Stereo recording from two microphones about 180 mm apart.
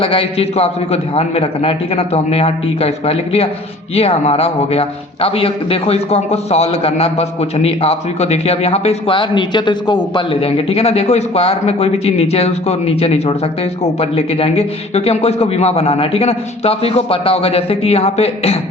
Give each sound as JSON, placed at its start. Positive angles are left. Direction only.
{"t": 0.0, "sound": "a man's voice", "side_deg": 30}